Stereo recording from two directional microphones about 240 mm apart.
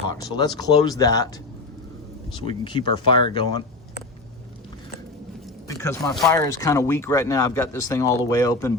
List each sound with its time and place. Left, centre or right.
0.1 s speech: centre
2.3 s speech: centre
5.6 s speech: centre